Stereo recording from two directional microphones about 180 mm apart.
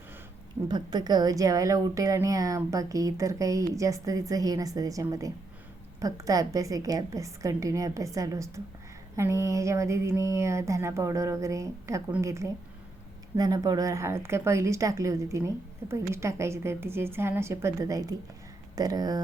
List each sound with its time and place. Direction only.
0.7 s a woman's voice: 25° right (ahead or behind)